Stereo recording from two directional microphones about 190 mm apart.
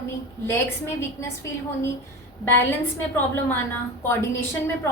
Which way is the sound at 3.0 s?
10° left (ahead or behind).